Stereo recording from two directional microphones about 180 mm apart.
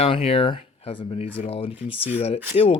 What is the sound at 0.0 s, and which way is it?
Speech, 30° left (ahead or behind).